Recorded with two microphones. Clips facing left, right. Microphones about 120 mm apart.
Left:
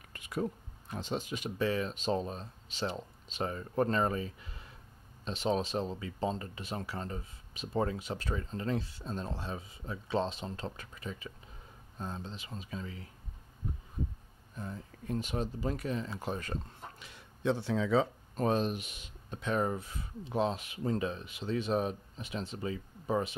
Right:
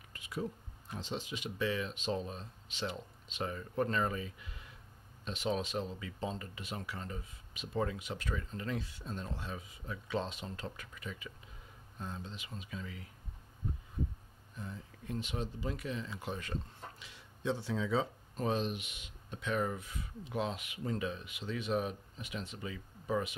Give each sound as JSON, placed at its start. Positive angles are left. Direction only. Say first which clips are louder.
{"t": 0.1, "sound": "a sound", "louder": "left 4 dB", "side_deg": 55}
{"t": 0.9, "sound": "speech", "louder": "left 4 dB", "side_deg": 50}
{"t": 14.6, "sound": "speech", "louder": "left 4 dB", "side_deg": 45}
{"t": 17.0, "sound": "speech", "louder": "left 5 dB", "side_deg": 60}
{"t": 18.3, "sound": "speech", "louder": "left 4 dB", "side_deg": 45}